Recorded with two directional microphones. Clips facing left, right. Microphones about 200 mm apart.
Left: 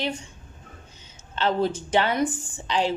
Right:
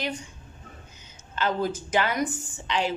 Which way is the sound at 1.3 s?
30° left (ahead or behind).